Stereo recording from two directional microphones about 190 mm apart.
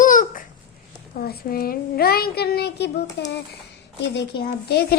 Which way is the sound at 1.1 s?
50° left (ahead or behind).